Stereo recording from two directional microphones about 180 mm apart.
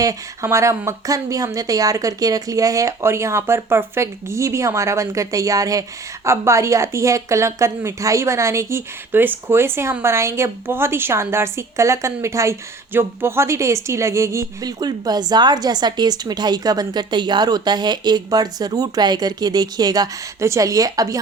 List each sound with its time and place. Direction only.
0.0 s speech: 15° right (ahead or behind)